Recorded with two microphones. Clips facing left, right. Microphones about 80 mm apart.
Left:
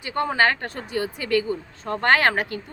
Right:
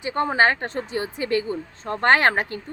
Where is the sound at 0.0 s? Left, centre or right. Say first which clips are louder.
Right 1 dB; right.